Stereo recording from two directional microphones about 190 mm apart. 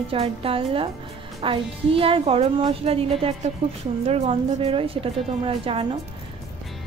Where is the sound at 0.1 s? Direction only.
30° right (ahead or behind).